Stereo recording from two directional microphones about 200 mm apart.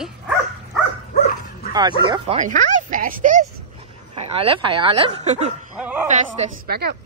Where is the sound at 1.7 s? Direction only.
20° right (ahead or behind).